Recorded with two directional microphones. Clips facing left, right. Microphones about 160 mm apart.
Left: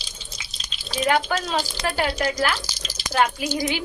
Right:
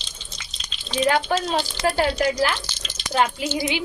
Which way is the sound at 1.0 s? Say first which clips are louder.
Right 1 dB; 30° right (ahead or behind).